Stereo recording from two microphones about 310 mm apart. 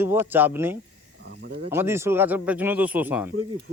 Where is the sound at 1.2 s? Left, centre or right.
Right.